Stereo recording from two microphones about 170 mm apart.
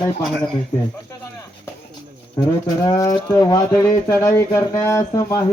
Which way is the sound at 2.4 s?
20° left (ahead or behind).